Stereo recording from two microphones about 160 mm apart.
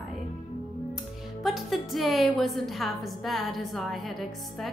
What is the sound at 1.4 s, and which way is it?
A woman's voice, centre (ahead or behind).